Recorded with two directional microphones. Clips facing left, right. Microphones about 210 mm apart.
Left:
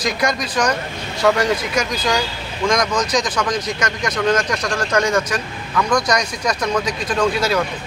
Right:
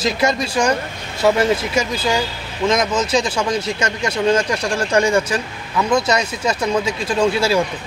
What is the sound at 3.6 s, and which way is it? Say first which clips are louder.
Speech: right 1 dB; 25° right (ahead or behind).